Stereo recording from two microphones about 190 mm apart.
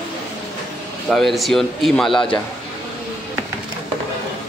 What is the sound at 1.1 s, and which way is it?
Speech, centre (ahead or behind).